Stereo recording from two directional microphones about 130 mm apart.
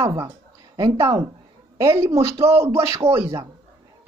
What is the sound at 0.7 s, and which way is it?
A woman's voice, 25° right (ahead or behind).